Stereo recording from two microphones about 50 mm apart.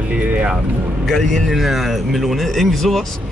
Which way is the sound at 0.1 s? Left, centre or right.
Right.